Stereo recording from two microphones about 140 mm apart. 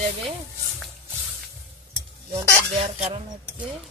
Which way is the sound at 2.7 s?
45° right (ahead or behind).